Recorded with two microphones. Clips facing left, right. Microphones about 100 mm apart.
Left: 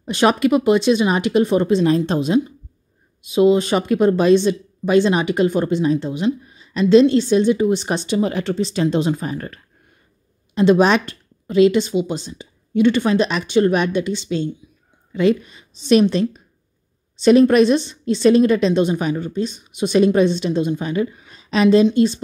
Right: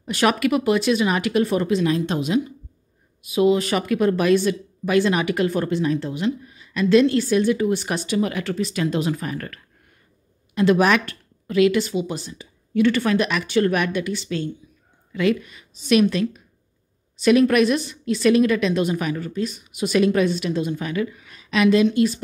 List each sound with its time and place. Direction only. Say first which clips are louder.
0.0 s speech: left 4 dB; 25° left (ahead or behind)